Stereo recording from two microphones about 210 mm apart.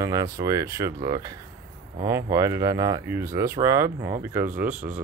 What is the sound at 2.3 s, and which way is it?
Speech, 15° right (ahead or behind).